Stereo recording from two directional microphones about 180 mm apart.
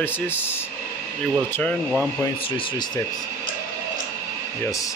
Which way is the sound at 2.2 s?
30° left (ahead or behind).